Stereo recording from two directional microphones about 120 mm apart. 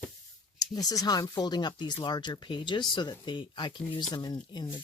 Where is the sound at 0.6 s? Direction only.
30° left (ahead or behind).